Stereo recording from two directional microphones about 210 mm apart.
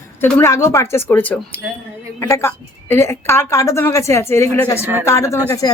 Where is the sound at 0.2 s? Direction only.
10° left (ahead or behind).